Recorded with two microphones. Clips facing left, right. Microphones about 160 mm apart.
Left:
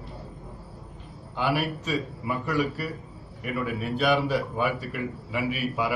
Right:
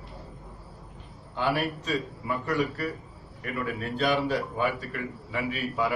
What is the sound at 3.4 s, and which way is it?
A man's voice, 10° left (ahead or behind).